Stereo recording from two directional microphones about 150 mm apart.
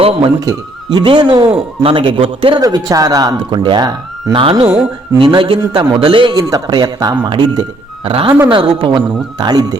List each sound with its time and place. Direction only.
0.2 s speech: 25° right (ahead or behind)
2.6 s speech: 25° right (ahead or behind)